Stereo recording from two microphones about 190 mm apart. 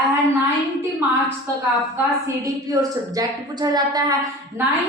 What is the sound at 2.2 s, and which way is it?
A woman's voice, 15° right (ahead or behind).